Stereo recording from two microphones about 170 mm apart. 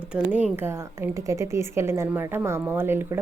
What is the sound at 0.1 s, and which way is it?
A woman's voice, 5° right (ahead or behind).